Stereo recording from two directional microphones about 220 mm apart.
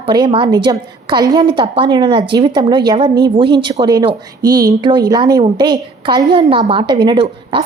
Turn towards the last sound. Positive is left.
turn(degrees=-25)  # may be behind; listen again after turning